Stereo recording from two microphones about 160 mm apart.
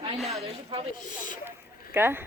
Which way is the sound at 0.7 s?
35° right (ahead or behind).